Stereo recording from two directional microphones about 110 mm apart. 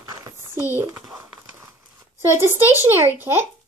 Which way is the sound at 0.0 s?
40° right (ahead or behind).